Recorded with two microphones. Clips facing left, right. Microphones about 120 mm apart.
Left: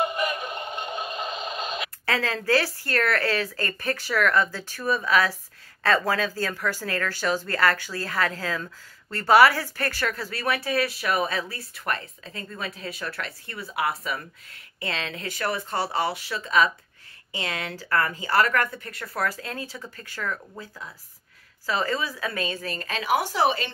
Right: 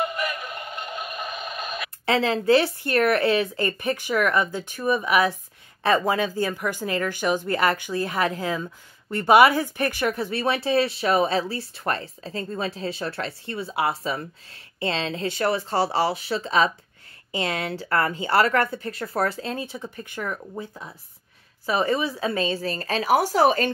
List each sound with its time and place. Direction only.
0.0 s synthetic singing: 20° left (ahead or behind)
2.0 s a woman's voice: 25° right (ahead or behind); by 23.7 s 45° right (ahead or behind)